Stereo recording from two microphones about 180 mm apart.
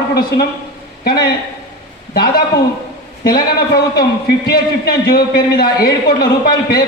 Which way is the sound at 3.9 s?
60° left (ahead or behind).